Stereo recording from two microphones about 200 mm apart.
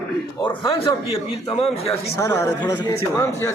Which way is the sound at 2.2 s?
15° left (ahead or behind).